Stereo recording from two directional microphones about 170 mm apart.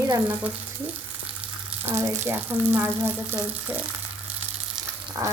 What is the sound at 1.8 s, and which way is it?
Speech, 15° right (ahead or behind).